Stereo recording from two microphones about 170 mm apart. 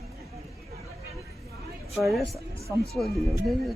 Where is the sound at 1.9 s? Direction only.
Centre (ahead or behind).